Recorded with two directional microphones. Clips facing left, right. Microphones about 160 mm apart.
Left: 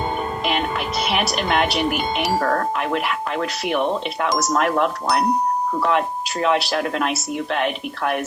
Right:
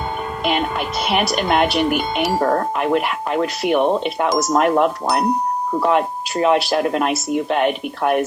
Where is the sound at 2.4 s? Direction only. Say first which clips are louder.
Right 5 dB; 20° right (ahead or behind).